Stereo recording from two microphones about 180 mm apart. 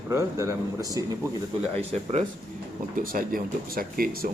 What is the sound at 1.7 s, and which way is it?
Speech, 35° right (ahead or behind).